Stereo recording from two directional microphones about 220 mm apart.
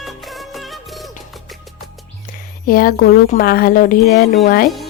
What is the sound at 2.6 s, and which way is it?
A woman's voice, 40° left (ahead or behind).